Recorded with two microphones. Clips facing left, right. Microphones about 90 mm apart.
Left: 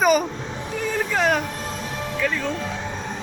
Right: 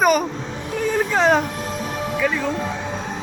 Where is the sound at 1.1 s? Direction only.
25° right (ahead or behind).